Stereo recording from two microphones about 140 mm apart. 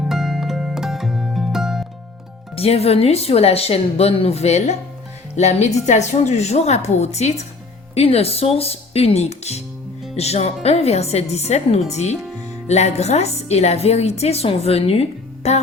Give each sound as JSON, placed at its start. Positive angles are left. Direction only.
{"t": 0.0, "sound": "music", "side_deg": -5}
{"t": 2.6, "sound": "a woman's voice", "side_deg": 45}